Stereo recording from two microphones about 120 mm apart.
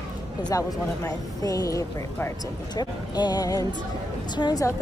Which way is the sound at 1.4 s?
30° left (ahead or behind).